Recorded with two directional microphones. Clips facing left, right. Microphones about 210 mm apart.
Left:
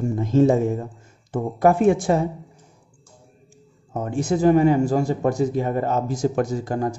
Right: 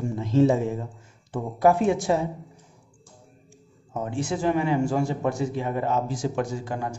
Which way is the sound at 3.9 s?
45° left (ahead or behind).